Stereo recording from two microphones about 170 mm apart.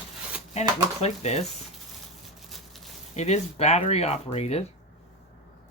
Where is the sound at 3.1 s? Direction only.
40° left (ahead or behind).